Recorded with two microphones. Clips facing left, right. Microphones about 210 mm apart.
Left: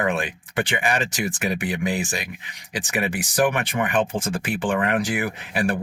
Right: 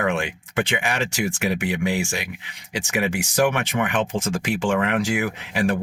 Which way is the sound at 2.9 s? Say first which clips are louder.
Right 2 dB; 15° right (ahead or behind).